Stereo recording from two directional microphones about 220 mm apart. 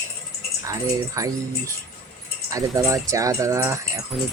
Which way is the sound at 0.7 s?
15° right (ahead or behind).